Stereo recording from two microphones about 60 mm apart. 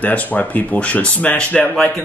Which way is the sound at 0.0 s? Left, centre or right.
Left.